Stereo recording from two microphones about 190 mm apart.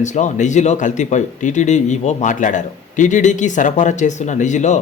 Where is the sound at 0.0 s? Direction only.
40° left (ahead or behind).